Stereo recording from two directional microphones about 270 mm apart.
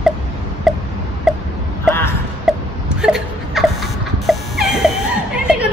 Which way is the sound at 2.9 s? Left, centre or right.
Centre.